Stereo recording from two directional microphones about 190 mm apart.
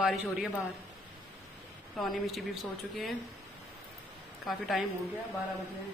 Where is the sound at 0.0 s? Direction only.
Centre (ahead or behind).